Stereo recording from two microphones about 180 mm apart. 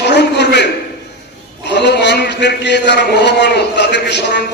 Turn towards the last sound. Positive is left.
turn(degrees=70)  # may be behind; listen again after turning